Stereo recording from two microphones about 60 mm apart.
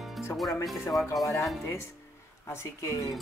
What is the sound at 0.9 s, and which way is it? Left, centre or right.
Speech, left.